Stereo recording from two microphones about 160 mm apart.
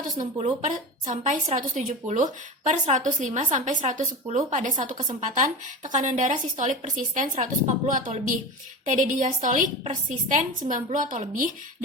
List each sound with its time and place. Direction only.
0.3 s a woman's voice: 45° right (ahead or behind)